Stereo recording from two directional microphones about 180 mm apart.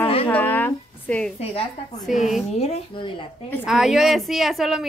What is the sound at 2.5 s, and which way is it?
Speech, 35° left (ahead or behind).